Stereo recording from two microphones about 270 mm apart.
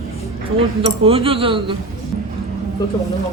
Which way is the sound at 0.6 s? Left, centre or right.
Right.